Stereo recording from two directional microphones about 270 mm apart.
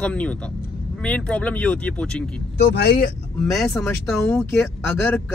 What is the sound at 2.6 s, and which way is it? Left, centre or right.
Speech, left.